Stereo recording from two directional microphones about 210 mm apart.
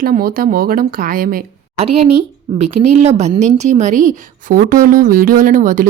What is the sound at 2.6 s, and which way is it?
A woman's voice, 30° right (ahead or behind).